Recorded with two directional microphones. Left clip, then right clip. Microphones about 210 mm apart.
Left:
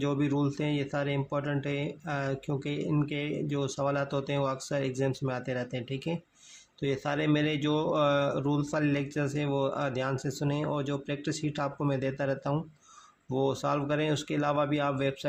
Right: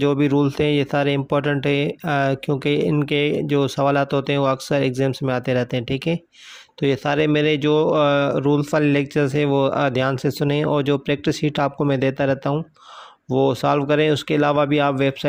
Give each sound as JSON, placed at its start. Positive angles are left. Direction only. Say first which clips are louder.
{"t": 0.0, "sound": "speech", "louder": "right 11 dB", "side_deg": -35}